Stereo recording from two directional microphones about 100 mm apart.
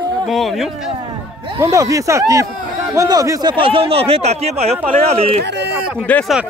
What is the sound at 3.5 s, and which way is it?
Speech, 65° right (ahead or behind).